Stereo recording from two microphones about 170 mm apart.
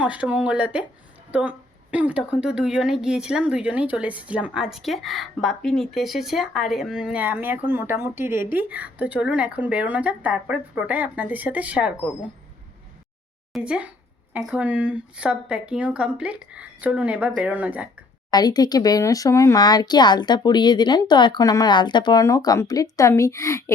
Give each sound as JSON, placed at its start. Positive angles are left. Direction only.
{"t": 0.0, "sound": "a woman's voice", "side_deg": -10}
{"t": 13.5, "sound": "a woman's voice", "side_deg": -5}
{"t": 18.3, "sound": "speech", "side_deg": 25}